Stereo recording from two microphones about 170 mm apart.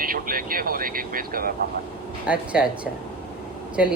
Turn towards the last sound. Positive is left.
turn(degrees=-5)  # may be behind; listen again after turning